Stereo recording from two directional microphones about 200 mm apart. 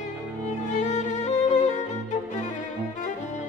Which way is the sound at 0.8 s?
35° left (ahead or behind).